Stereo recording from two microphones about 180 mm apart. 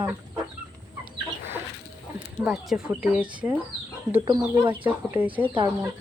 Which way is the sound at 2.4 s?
Centre (ahead or behind).